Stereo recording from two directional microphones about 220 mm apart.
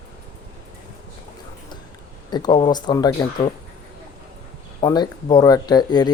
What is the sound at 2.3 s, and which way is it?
Speech, 20° left (ahead or behind).